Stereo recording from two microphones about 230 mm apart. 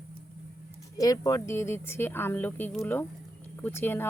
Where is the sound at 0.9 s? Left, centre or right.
Centre.